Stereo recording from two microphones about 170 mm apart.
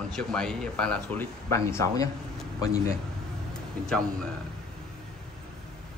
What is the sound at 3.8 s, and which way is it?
Speech, 5° left (ahead or behind).